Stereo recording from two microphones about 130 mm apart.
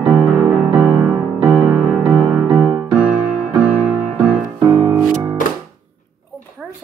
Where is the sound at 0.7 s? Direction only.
15° right (ahead or behind).